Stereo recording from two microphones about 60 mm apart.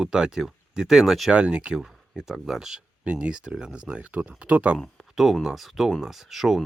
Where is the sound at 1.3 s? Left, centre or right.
Centre.